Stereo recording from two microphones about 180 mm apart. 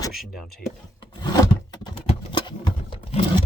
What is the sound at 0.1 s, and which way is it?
Speech, centre (ahead or behind).